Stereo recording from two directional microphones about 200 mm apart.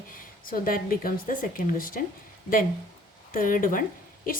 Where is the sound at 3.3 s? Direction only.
45° left (ahead or behind).